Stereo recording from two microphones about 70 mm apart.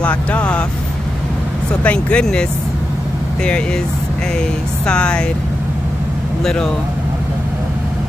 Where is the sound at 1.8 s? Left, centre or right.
Centre.